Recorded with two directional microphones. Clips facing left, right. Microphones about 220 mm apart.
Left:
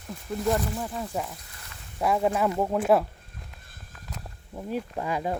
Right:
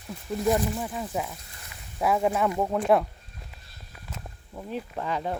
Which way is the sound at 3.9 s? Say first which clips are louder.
Even; 5° right (ahead or behind).